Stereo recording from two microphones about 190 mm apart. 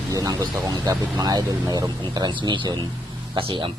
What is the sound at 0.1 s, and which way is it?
A man's voice, 20° right (ahead or behind).